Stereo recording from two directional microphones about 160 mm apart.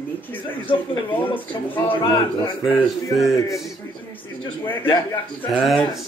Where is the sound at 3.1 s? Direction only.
Centre (ahead or behind).